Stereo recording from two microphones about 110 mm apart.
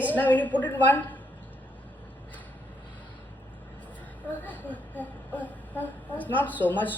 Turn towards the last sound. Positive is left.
turn(degrees=15)  # may be behind; listen again after turning